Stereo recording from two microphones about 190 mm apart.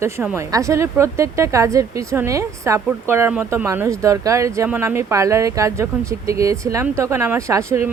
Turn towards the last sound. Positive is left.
turn(degrees=-15)  # may be behind; listen again after turning